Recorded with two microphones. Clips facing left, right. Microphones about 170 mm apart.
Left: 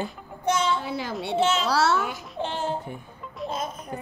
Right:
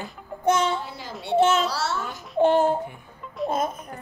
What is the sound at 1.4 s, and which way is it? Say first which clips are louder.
Speech: right 4 dB; 50° right (ahead or behind).